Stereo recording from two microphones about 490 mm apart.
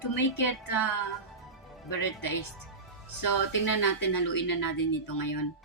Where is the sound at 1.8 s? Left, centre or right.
Left.